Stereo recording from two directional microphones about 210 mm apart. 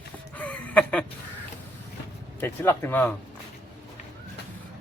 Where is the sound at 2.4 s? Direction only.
10° left (ahead or behind).